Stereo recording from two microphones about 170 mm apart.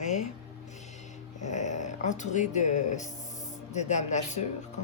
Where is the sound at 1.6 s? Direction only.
45° left (ahead or behind).